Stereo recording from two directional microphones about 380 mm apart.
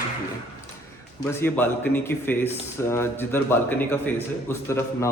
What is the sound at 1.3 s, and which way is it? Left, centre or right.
Speech, centre.